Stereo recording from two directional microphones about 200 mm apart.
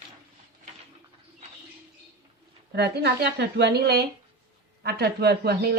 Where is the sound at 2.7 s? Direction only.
55° right (ahead or behind).